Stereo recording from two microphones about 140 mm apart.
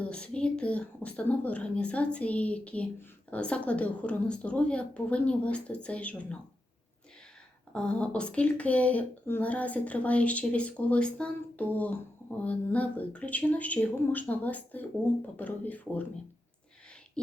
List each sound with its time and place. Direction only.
0.0 s a woman's voice: 5° left (ahead or behind)
7.7 s a woman's voice: 5° left (ahead or behind)